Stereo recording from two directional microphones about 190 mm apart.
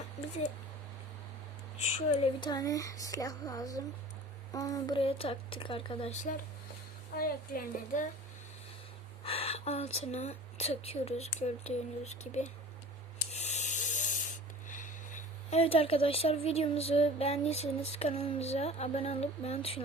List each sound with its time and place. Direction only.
2.0 s a woman's voice: 25° left (ahead or behind); by 8.0 s 50° left (ahead or behind)
9.2 s speech: 30° left (ahead or behind)
13.3 s spray: 35° left (ahead or behind)
14.7 s speech: 40° left (ahead or behind)